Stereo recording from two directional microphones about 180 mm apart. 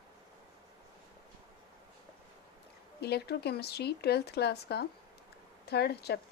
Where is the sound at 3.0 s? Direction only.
65° left (ahead or behind).